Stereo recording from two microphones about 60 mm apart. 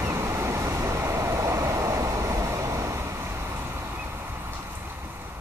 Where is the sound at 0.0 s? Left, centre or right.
Right.